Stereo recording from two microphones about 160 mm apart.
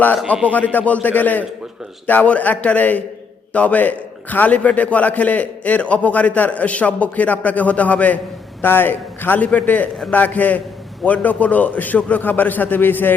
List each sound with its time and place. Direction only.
0.5 s a man's voice: 10° left (ahead or behind)